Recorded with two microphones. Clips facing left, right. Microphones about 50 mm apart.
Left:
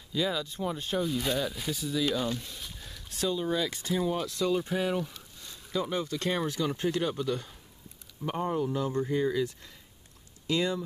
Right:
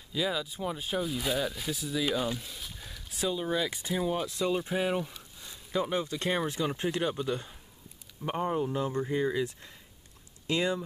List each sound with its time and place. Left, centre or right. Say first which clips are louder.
0.1 s speech: left 1 dB; centre; by 10.8 s right